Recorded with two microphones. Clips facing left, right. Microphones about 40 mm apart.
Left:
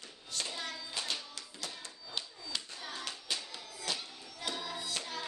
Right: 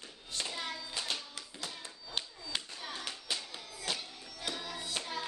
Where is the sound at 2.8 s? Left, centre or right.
Centre.